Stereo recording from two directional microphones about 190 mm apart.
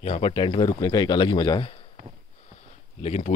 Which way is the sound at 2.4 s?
35° left (ahead or behind).